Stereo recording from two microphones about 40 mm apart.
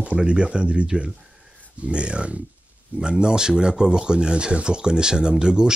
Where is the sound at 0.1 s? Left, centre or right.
Right.